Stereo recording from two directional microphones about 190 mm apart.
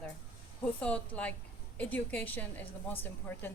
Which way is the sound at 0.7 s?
5° left (ahead or behind).